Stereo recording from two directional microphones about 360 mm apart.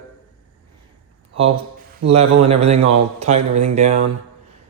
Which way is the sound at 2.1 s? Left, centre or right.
Centre.